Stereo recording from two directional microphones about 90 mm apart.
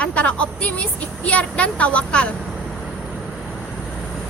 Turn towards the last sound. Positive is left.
turn(degrees=0)  # may be behind; listen again after turning